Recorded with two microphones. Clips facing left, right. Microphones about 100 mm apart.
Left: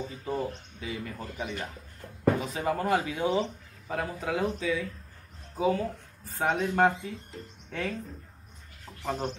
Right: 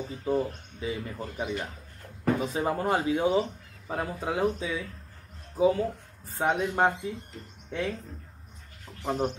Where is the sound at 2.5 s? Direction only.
30° right (ahead or behind).